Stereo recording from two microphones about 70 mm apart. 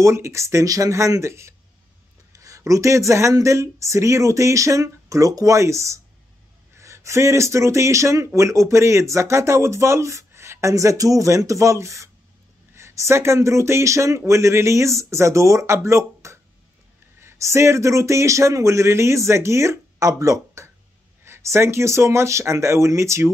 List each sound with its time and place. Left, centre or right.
0.0 s speech: right